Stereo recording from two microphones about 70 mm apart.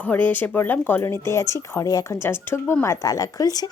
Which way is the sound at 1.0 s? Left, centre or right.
Left.